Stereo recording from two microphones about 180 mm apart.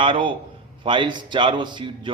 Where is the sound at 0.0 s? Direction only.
30° right (ahead or behind).